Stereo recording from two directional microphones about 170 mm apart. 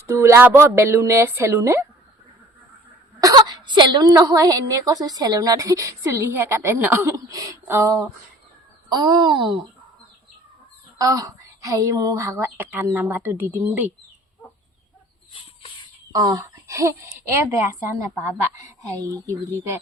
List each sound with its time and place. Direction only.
0.1 s speech: 15° right (ahead or behind)
3.2 s a woman's voice: 20° right (ahead or behind)
10.9 s speech: 20° right (ahead or behind)
16.1 s a woman's voice: 20° right (ahead or behind)